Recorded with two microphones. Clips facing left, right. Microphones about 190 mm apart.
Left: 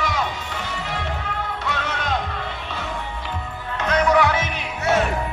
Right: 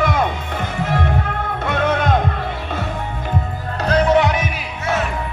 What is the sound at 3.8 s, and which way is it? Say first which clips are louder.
Music: right 3 dB; 30° right (ahead or behind).